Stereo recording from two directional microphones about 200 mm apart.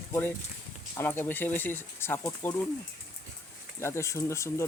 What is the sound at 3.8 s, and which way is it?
Speech, 15° left (ahead or behind).